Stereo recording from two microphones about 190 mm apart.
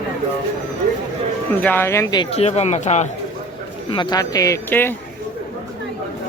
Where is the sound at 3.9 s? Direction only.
20° left (ahead or behind).